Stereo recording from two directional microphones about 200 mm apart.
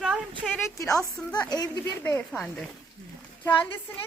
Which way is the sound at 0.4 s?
Centre (ahead or behind).